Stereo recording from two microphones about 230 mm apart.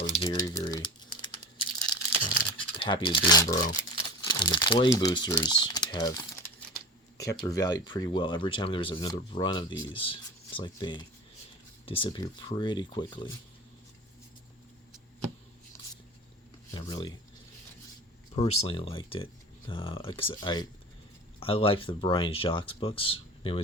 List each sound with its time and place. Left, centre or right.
0.0 s typing: left
2.4 s computer keyboard: left
3.2 s speech: centre
16.7 s speech: centre
18.3 s speech: left